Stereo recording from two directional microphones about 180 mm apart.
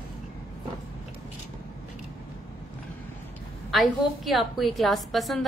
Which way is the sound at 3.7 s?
Centre (ahead or behind).